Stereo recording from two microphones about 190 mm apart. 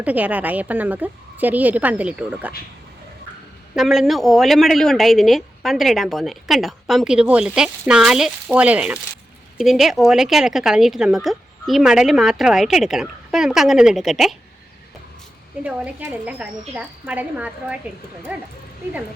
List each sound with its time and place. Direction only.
0.0 s a woman's voice: 10° right (ahead or behind)
3.8 s speech: centre (ahead or behind)
15.6 s a woman's voice: 10° right (ahead or behind)